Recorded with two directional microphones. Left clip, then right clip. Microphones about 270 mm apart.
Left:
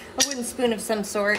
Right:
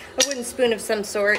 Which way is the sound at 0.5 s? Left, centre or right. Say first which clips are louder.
Right 4 dB; centre.